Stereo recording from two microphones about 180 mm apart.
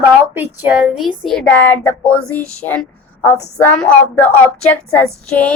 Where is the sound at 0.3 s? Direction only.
10° right (ahead or behind).